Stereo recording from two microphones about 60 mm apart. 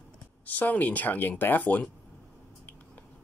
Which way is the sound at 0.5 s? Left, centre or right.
Left.